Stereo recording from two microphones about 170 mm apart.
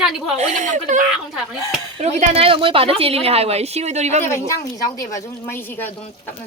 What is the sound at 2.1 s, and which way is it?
A woman's voice, 35° right (ahead or behind).